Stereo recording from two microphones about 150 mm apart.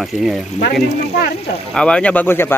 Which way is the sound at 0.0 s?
Centre (ahead or behind).